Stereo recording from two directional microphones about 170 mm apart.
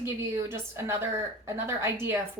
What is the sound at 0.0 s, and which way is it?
A woman's voice, 15° right (ahead or behind).